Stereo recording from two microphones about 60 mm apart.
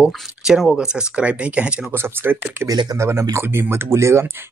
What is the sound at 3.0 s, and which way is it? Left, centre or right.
Speech, right.